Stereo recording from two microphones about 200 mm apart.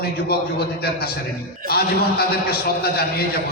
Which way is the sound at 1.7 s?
50° left (ahead or behind).